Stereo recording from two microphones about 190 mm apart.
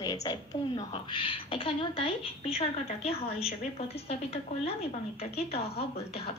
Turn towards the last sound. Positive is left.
turn(degrees=30)  # may be behind; listen again after turning